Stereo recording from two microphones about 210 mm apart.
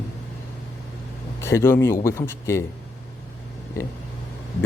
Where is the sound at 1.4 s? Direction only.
10° left (ahead or behind).